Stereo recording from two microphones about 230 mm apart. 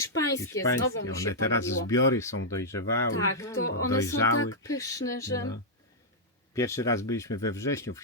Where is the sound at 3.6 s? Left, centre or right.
Left.